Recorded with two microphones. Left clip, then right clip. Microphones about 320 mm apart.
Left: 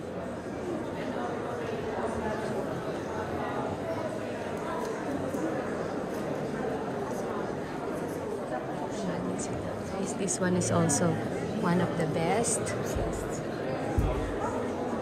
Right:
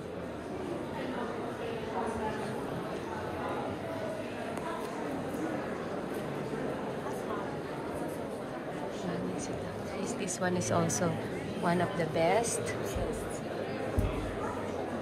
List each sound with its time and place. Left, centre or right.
10.4 s a woman's voice: centre